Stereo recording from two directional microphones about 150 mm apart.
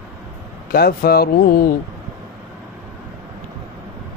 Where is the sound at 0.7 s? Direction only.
90° left.